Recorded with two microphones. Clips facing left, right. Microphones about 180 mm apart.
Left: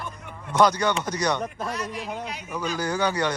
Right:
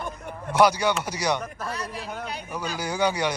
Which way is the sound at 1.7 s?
30° right (ahead or behind).